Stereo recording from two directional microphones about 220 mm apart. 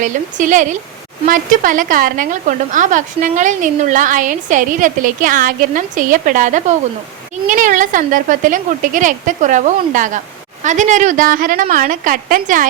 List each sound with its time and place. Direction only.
0.0 s a woman's voice: 35° right (ahead or behind)